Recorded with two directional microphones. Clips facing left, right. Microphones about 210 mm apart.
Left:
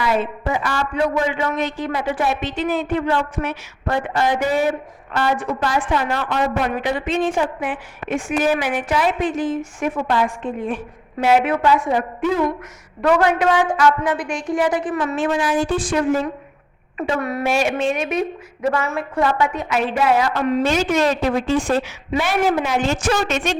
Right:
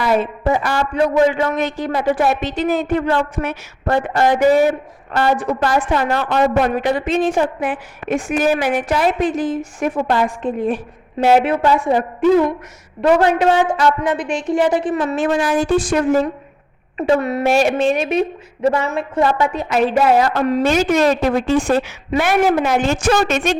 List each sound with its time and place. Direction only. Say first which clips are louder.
0.0 s a woman's voice: right 4 dB; 40° right (ahead or behind)
15.1 s a woman's voice: right 2 dB; 40° right (ahead or behind)
17.2 s a woman's voice: right 1 dB; 25° right (ahead or behind)
18.7 s a woman's voice: right 3 dB; 20° right (ahead or behind)
19.4 s a woman's voice: right 3 dB; 40° right (ahead or behind)
20.7 s a woman's voice: right 3 dB; 50° right (ahead or behind)